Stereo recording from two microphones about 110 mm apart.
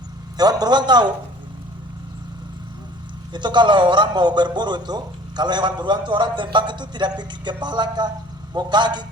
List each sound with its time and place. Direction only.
0.3 s a man's voice: 35° right (ahead or behind)
3.3 s a man's voice: 45° right (ahead or behind)